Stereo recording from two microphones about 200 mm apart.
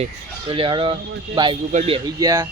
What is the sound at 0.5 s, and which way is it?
Speech, 25° right (ahead or behind).